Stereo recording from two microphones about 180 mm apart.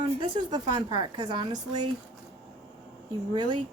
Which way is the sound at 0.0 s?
25° right (ahead or behind).